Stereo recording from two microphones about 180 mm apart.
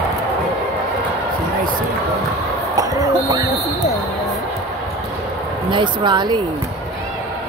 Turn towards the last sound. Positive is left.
turn(degrees=-25)  # may be behind; listen again after turning